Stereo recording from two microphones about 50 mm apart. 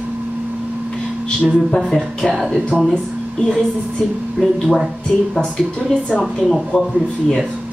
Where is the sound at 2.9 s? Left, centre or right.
Centre.